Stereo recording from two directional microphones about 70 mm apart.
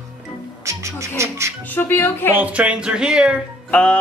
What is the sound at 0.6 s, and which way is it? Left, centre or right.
Music, right.